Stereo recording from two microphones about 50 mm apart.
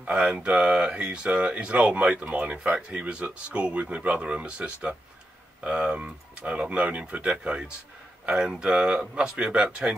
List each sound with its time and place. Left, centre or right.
0.0 s speech: right